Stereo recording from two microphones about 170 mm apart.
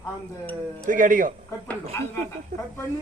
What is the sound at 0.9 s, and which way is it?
Speech, 50° right (ahead or behind).